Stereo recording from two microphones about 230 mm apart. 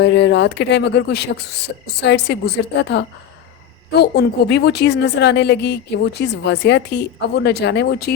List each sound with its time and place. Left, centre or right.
0.0 s a woman's voice: left